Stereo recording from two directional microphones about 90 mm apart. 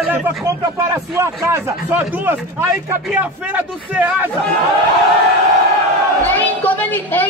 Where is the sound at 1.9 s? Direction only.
20° right (ahead or behind).